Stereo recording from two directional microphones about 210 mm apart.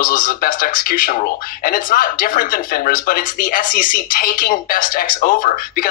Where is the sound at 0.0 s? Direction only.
40° left (ahead or behind).